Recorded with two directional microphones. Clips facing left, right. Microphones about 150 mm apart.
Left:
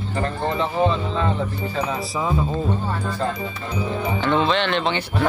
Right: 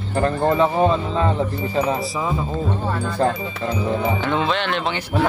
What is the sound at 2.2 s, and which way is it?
Speech, centre (ahead or behind).